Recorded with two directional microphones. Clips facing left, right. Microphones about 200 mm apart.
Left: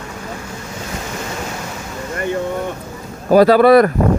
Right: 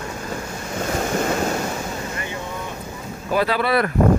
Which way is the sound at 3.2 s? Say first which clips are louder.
Left 12 dB; 40° left (ahead or behind).